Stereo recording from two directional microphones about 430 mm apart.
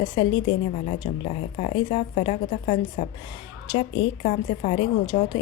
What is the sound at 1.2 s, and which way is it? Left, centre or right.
Speech, centre.